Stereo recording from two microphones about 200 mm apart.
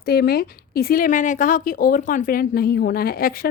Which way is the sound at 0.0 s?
50° left (ahead or behind).